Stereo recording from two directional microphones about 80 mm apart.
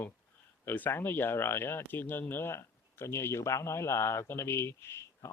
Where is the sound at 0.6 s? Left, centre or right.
Left.